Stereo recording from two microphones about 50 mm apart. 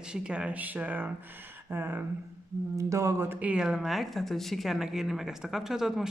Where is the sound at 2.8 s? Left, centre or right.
Right.